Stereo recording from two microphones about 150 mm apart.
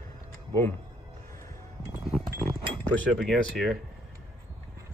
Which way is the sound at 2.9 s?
Centre (ahead or behind).